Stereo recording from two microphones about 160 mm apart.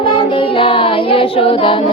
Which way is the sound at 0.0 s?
30° left (ahead or behind).